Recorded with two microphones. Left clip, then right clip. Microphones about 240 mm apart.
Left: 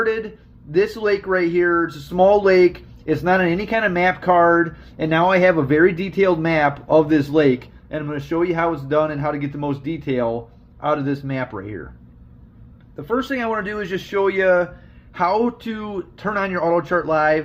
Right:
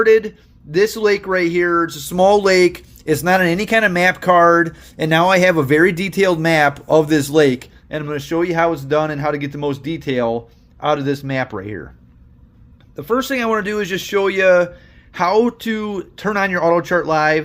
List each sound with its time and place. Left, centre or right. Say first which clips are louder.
0.0 s speech: right 9 dB; right
13.0 s speech: right 4 dB; right